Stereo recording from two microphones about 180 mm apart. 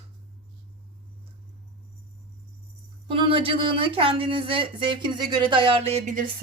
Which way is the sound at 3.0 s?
30° right (ahead or behind).